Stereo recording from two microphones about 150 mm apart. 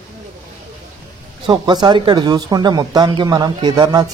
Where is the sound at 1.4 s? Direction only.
30° right (ahead or behind).